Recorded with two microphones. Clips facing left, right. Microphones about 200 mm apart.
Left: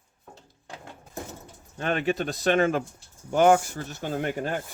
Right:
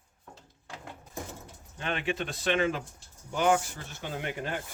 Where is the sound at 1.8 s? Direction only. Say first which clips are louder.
Left 6 dB; 45° left (ahead or behind).